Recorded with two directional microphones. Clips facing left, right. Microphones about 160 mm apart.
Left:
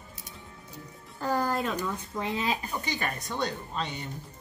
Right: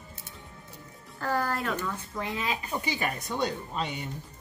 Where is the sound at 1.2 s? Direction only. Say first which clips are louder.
Left 1 dB; 15° left (ahead or behind).